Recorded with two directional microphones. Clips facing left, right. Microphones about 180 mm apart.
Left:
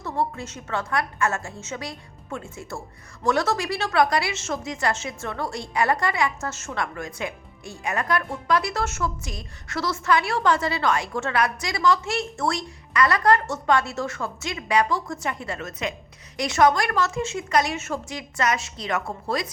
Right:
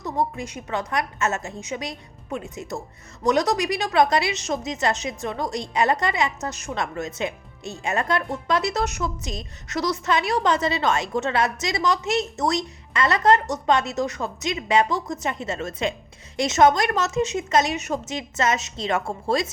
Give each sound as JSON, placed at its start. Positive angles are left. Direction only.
{"t": 0.0, "sound": "a woman's voice", "side_deg": -15}